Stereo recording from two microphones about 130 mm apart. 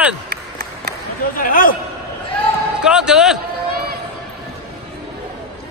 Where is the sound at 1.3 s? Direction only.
90° left.